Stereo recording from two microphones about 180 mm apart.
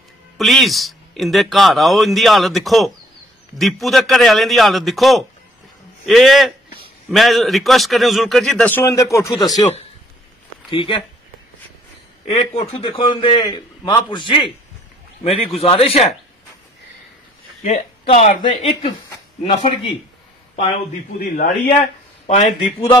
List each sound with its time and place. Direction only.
0.4 s a man's voice: centre (ahead or behind); by 9.3 s 15° left (ahead or behind)
10.7 s a man's voice: 30° left (ahead or behind)
12.3 s a man's voice: 30° left (ahead or behind)
17.6 s speech: 35° left (ahead or behind)
21.2 s a man's voice: 50° left (ahead or behind)
22.2 s speech: 40° left (ahead or behind)